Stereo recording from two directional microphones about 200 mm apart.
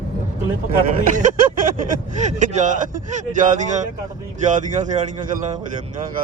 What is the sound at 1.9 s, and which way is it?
Speech, 35° right (ahead or behind).